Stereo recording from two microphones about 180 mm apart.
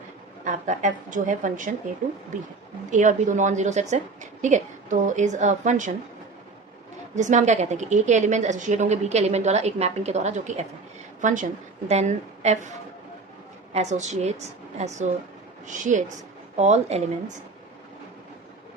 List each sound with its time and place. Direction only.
0.4 s a woman's voice: 45° right (ahead or behind)
2.9 s a woman's voice: 40° right (ahead or behind)
7.2 s a woman's voice: 40° right (ahead or behind)
13.7 s a woman's voice: 40° right (ahead or behind)